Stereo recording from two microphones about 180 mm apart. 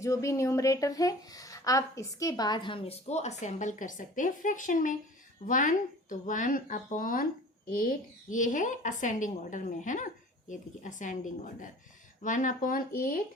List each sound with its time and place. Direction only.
0.0 s speech: 15° left (ahead or behind); by 13.1 s 50° left (ahead or behind)